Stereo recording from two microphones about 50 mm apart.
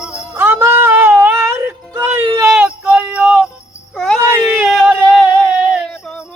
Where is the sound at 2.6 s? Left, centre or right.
Centre.